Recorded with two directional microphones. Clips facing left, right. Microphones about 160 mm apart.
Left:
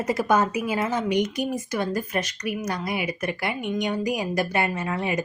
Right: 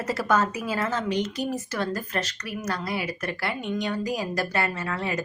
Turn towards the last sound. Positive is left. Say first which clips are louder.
# left 3 dB
turn(degrees=15)  # may be behind; listen again after turning